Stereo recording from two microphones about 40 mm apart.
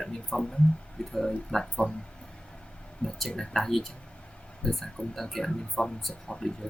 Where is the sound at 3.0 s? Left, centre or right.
Centre.